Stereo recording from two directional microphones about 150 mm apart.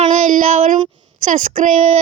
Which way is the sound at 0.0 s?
55° right (ahead or behind).